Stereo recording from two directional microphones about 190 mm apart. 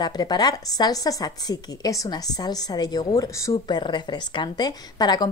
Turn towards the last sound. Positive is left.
turn(degrees=20)  # may be behind; listen again after turning